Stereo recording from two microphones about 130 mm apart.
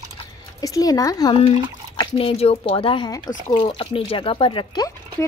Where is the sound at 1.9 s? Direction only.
40° left (ahead or behind).